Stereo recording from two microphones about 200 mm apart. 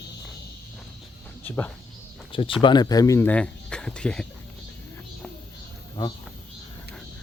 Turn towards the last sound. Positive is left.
turn(degrees=20)  # may be behind; listen again after turning